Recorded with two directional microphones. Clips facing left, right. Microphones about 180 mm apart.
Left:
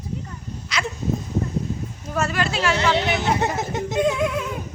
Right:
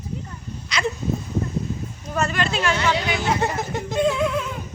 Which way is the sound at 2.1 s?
5° left (ahead or behind).